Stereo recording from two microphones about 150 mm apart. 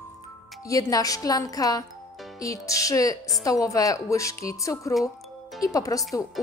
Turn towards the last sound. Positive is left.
turn(degrees=20)  # may be behind; listen again after turning